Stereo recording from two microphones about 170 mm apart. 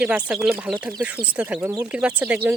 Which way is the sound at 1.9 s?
5° right (ahead or behind).